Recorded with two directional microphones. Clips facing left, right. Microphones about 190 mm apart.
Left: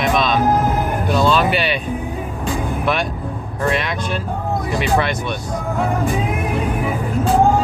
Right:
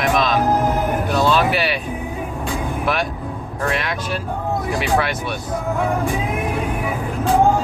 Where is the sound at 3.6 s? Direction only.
Centre (ahead or behind).